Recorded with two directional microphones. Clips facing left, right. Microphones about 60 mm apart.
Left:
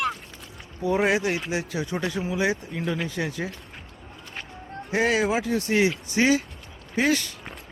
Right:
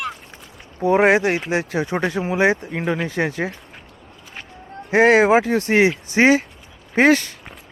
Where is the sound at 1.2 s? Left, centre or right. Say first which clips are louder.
Right 6 dB; right.